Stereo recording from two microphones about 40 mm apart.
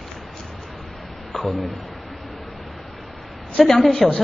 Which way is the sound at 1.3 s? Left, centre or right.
Centre.